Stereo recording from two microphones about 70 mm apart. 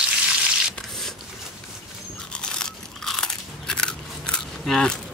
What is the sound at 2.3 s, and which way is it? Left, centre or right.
Crunch, centre.